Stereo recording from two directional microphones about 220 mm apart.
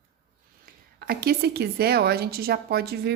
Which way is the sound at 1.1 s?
45° right (ahead or behind).